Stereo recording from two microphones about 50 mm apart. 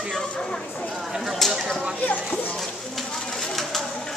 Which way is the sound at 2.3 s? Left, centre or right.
Left.